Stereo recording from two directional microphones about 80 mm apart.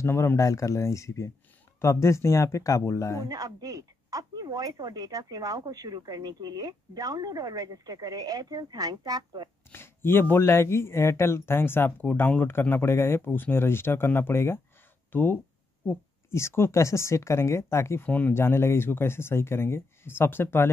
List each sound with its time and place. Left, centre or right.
0.0 s speech: left
3.3 s speech: right
9.7 s speech: left
18.0 s speech: left